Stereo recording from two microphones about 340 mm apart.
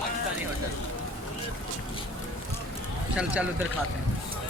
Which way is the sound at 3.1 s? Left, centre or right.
Centre.